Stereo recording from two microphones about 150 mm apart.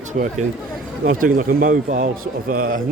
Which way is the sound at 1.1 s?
65° right (ahead or behind).